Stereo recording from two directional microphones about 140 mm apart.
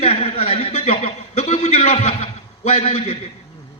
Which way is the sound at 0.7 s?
55° left (ahead or behind).